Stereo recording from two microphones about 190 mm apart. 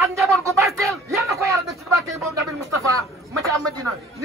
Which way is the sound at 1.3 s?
15° right (ahead or behind).